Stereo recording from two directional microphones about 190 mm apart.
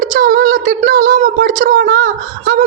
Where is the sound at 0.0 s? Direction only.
45° right (ahead or behind).